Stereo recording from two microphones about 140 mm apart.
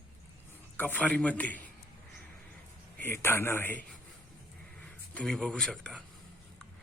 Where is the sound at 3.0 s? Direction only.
15° left (ahead or behind).